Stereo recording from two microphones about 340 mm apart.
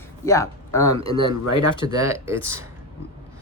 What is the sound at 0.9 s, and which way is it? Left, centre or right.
Speech, centre.